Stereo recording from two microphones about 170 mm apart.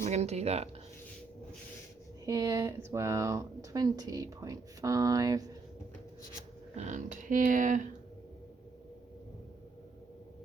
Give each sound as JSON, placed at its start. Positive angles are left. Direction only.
{"t": 0.0, "sound": "speech", "side_deg": -40}
{"t": 2.2, "sound": "speech", "side_deg": -20}
{"t": 6.7, "sound": "speech", "side_deg": -45}